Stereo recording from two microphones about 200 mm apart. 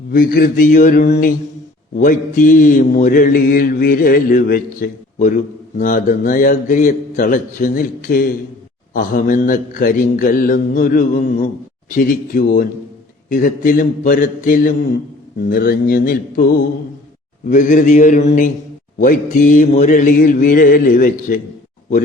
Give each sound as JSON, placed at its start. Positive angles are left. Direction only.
{"t": 0.1, "sound": "mantra", "side_deg": 45}
{"t": 17.5, "sound": "mantra", "side_deg": 40}